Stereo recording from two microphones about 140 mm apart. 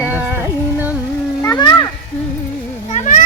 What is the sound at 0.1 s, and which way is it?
Music, 15° right (ahead or behind).